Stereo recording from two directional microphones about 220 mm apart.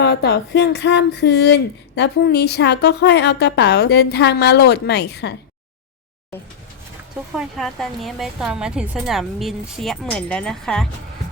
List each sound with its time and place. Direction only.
0.0 s speech: 50° left (ahead or behind)
7.3 s a woman's voice: centre (ahead or behind)